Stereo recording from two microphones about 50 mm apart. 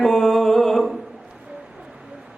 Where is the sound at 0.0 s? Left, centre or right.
Centre.